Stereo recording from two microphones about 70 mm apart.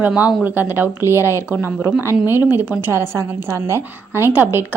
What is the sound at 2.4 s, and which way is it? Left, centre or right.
Speech, right.